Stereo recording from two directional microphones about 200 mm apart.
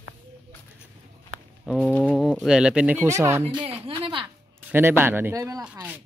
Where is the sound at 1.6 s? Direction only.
5° left (ahead or behind); by 3.7 s 25° right (ahead or behind).